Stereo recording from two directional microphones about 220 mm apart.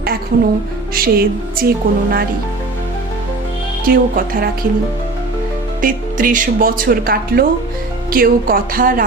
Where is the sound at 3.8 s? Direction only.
40° right (ahead or behind).